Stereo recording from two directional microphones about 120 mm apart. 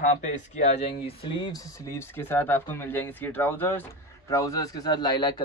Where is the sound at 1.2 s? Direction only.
40° left (ahead or behind).